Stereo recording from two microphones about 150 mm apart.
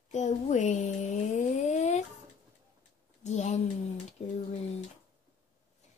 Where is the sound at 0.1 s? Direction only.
50° left (ahead or behind).